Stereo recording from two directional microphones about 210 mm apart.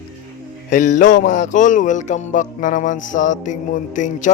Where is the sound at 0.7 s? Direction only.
35° left (ahead or behind).